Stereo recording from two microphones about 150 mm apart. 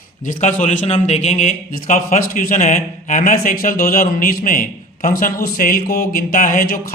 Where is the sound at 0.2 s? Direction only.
60° left (ahead or behind).